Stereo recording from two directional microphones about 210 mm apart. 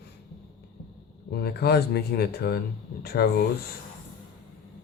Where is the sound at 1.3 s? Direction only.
50° left (ahead or behind).